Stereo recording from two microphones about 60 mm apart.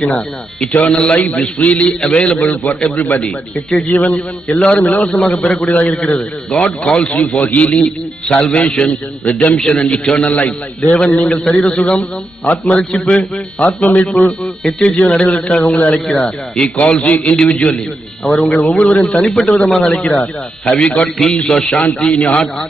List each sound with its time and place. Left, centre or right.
0.1 s a man's voice: centre
2.5 s a man's voice: left
4.6 s a man's voice: centre
7.7 s a man's voice: centre
19.7 s a man's voice: centre
20.0 s a man's voice: centre